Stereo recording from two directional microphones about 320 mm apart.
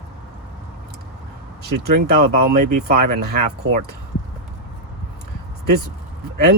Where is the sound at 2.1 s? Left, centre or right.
Right.